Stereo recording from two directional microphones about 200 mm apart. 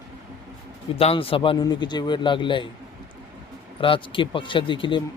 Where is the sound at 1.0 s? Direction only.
30° left (ahead or behind).